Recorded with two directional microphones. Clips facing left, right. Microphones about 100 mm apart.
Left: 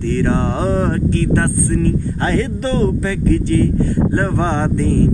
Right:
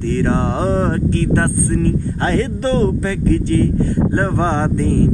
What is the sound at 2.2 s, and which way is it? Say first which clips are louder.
Speech: right 1 dB; 35° right (ahead or behind).